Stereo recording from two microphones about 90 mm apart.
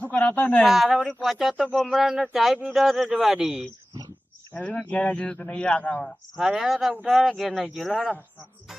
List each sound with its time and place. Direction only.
0.0 s speech: 20° left (ahead or behind)
0.6 s speech: 5° right (ahead or behind)
4.5 s a man's voice: 10° left (ahead or behind)
6.3 s speech: 5° right (ahead or behind)